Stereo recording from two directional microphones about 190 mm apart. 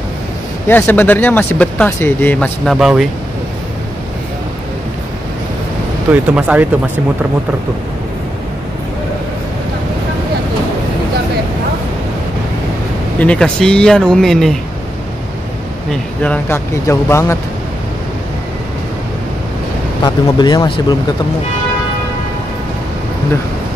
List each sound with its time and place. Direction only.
0.7 s speech: 10° left (ahead or behind)
6.1 s speech: 5° right (ahead or behind)
13.2 s speech: 5° left (ahead or behind)
15.9 s speech: 5° left (ahead or behind)
20.0 s speech: 25° left (ahead or behind)